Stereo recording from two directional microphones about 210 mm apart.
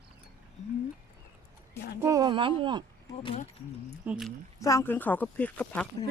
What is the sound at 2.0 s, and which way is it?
Speech, 20° right (ahead or behind).